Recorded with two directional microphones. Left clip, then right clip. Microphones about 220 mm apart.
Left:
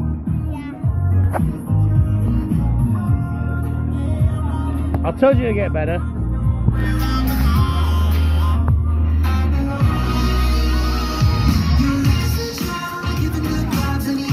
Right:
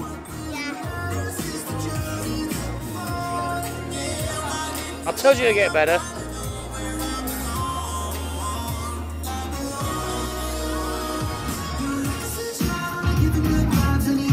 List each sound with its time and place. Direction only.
5.2 s speech: centre (ahead or behind)
9.9 s music: 50° right (ahead or behind)
11.4 s music: 45° right (ahead or behind)